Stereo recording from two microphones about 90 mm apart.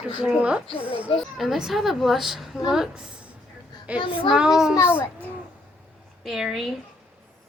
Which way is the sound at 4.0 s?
75° left (ahead or behind).